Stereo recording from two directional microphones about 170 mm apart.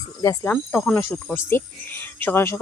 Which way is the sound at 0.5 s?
5° left (ahead or behind).